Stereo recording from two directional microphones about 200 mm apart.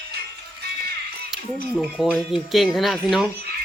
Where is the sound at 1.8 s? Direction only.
5° right (ahead or behind).